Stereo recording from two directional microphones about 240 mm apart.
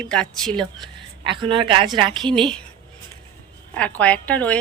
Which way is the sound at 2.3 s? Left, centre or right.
Centre.